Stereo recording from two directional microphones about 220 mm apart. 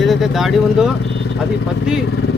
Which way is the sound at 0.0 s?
Centre (ahead or behind).